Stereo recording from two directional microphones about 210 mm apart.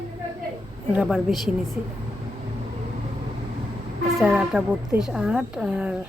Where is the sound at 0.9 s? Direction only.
5° right (ahead or behind).